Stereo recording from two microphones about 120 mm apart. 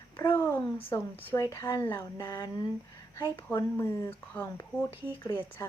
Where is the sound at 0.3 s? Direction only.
25° left (ahead or behind).